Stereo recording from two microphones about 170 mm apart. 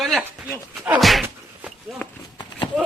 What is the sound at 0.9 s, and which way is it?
Speech, centre (ahead or behind).